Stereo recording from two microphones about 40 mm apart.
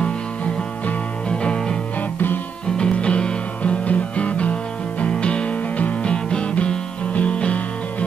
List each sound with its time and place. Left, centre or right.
1.3 s music: left
2.8 s music: left